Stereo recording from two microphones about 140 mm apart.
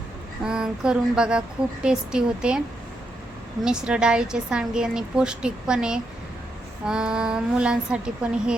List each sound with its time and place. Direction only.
0.4 s a woman's voice: 5° right (ahead or behind)
3.6 s a woman's voice: 5° right (ahead or behind)